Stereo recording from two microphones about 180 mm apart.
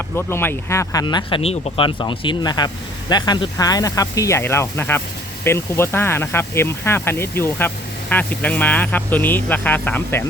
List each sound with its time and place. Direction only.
0.2 s speech: 10° left (ahead or behind)